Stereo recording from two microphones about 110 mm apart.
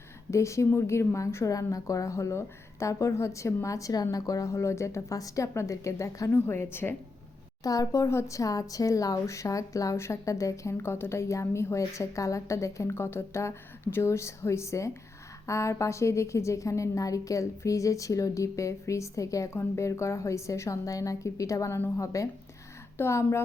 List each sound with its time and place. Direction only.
0.3 s speech: 25° left (ahead or behind)
7.6 s speech: 35° left (ahead or behind)